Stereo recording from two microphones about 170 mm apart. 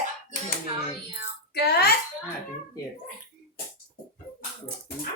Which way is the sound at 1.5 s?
70° left (ahead or behind).